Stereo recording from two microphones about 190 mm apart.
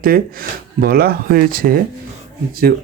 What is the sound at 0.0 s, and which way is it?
A man's voice, 50° right (ahead or behind).